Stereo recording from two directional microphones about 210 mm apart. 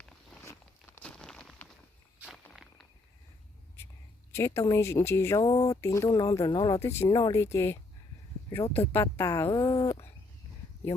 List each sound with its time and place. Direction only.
0.9 s a sound: 5° left (ahead or behind)
2.2 s walk: centre (ahead or behind)
4.3 s speech: 10° left (ahead or behind)